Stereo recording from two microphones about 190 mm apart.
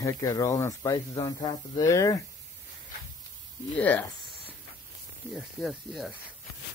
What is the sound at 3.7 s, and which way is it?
Speech, 10° left (ahead or behind).